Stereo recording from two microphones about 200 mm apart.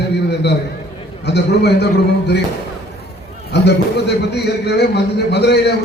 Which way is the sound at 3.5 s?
55° left (ahead or behind).